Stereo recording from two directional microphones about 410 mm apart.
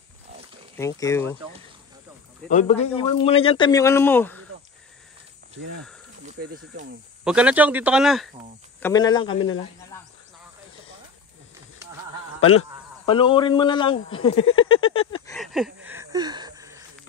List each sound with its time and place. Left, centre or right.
0.7 s speech: centre
2.5 s speech: centre
6.2 s speech: centre
7.2 s speech: centre
8.8 s speech: centre
13.0 s speech: centre
15.3 s gasp: centre